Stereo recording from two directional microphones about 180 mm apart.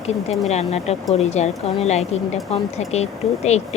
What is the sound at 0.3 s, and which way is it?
Speech, 35° left (ahead or behind).